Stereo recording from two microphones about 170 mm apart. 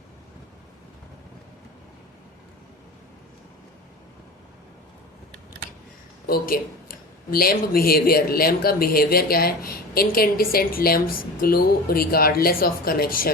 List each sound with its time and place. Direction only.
6.2 s speech: 60° left (ahead or behind)